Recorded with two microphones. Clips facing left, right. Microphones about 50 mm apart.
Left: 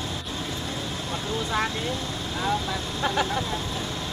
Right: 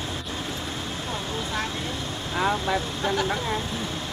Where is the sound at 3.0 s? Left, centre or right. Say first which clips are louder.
Left 2 dB; centre.